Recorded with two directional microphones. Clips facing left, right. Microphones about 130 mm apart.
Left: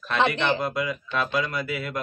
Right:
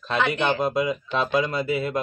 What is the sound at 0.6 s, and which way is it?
Speech, 25° right (ahead or behind).